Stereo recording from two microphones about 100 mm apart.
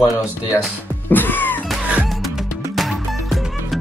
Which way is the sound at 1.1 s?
20° left (ahead or behind).